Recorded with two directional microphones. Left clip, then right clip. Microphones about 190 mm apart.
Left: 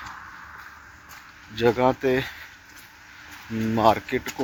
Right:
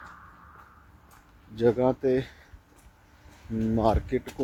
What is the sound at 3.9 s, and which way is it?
Speech, 15° right (ahead or behind).